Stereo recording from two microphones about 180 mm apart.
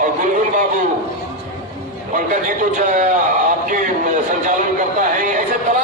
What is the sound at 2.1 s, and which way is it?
A man's voice, 45° right (ahead or behind).